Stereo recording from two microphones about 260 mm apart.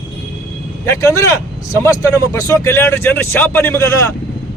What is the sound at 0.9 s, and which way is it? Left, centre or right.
A man's voice, centre.